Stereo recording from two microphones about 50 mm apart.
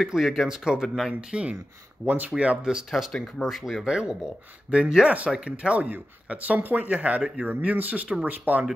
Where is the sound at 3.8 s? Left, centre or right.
Centre.